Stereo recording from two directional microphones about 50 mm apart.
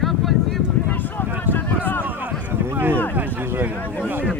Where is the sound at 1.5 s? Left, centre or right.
Left.